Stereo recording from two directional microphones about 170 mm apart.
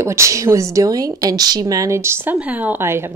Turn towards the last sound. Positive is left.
turn(degrees=-15)  # may be behind; listen again after turning